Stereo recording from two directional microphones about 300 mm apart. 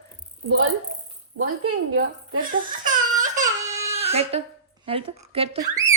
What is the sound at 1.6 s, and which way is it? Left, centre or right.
Speech, right.